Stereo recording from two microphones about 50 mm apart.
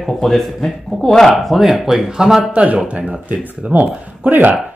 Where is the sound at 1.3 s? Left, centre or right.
Centre.